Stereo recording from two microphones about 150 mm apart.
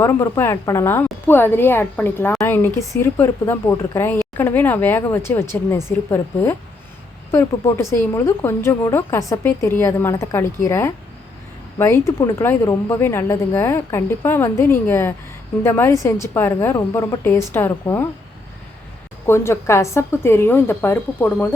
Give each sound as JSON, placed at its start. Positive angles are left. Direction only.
{"t": 0.0, "sound": "a woman's voice", "side_deg": 15}
{"t": 19.2, "sound": "a woman's voice", "side_deg": 15}